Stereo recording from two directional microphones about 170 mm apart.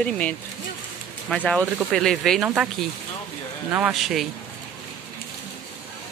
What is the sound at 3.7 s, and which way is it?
Speech, 5° right (ahead or behind).